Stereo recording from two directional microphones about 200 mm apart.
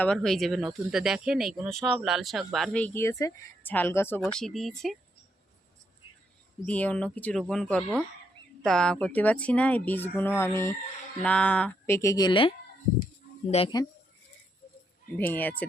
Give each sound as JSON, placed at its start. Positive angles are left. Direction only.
{"t": 0.0, "sound": "speech", "side_deg": 5}
{"t": 6.7, "sound": "speech", "side_deg": 5}
{"t": 15.2, "sound": "speech", "side_deg": 10}